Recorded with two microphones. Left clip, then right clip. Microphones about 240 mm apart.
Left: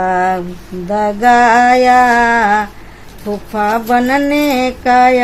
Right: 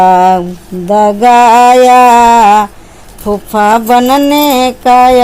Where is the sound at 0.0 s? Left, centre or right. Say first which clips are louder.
Right 9 dB; right.